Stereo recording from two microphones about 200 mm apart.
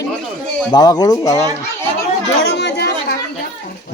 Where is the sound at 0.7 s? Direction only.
20° left (ahead or behind).